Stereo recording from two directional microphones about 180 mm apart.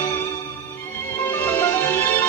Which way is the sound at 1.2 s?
10° left (ahead or behind).